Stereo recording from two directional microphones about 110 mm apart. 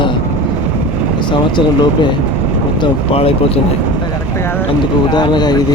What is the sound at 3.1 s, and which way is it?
Speech, 60° left (ahead or behind).